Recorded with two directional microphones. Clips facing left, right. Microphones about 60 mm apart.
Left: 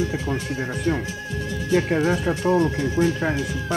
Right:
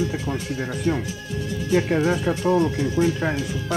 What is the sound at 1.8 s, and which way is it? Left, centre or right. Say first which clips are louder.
Speech: even; centre.